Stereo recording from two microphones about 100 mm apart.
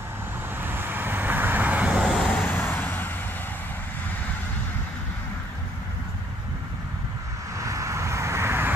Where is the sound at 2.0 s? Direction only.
10° left (ahead or behind).